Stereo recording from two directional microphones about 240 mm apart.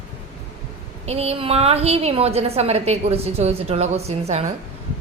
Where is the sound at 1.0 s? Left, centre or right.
Right.